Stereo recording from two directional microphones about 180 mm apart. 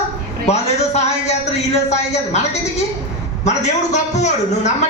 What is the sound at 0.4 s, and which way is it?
A man's voice, 40° left (ahead or behind).